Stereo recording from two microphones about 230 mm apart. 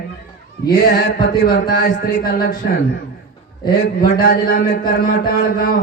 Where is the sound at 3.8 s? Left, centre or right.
Left.